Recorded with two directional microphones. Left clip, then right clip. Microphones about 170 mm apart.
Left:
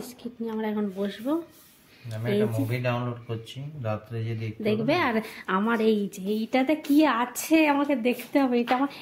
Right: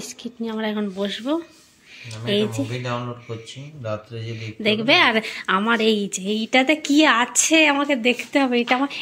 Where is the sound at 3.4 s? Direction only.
30° left (ahead or behind).